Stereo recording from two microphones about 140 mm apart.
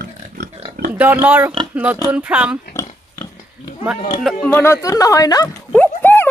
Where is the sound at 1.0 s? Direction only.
15° right (ahead or behind).